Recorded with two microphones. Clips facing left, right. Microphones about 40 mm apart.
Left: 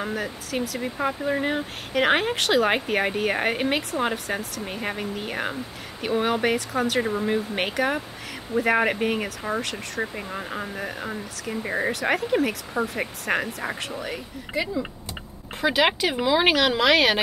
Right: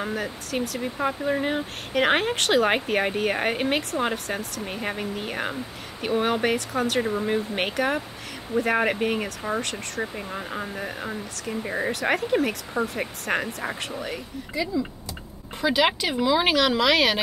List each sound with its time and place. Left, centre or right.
0.0 s speech: centre
11.9 s speech: centre
14.5 s speech: left
15.6 s speech: centre